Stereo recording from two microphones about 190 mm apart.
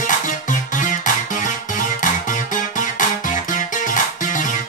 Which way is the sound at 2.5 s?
45° left (ahead or behind).